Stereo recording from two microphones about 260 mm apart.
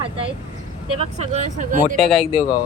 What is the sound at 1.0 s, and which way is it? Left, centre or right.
Speech, right.